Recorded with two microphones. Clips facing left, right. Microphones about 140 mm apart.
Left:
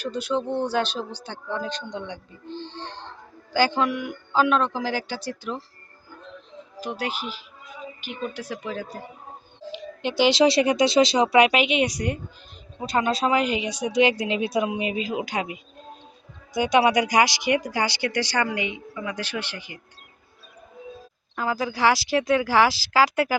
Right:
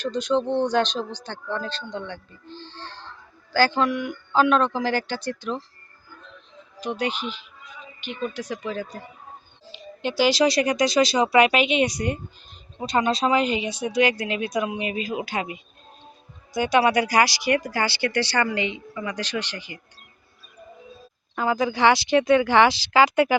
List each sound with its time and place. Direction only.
0.0 s speech: 10° left (ahead or behind)
7.0 s speech: 5° left (ahead or behind)
16.6 s speech: 20° left (ahead or behind)
21.3 s speech: centre (ahead or behind)